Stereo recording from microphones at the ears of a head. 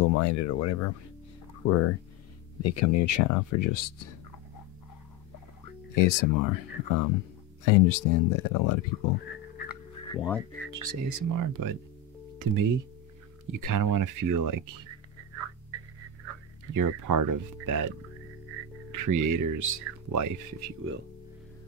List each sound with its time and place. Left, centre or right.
0.0 s speech: left
5.7 s speech: left
10.7 s speech: right
13.5 s a sound: right
18.5 s speech: right